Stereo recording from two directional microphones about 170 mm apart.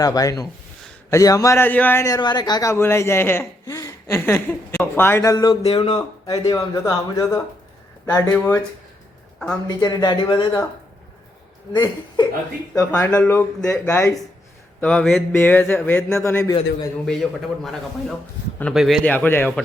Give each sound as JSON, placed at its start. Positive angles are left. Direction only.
{"t": 0.0, "sound": "a man's voice", "side_deg": 20}
{"t": 9.6, "sound": "speech", "side_deg": 20}
{"t": 11.7, "sound": "a man's voice", "side_deg": 25}
{"t": 14.8, "sound": "a man's voice", "side_deg": 5}
{"t": 17.1, "sound": "a man's voice", "side_deg": 0}
{"t": 19.0, "sound": "a man's voice", "side_deg": 10}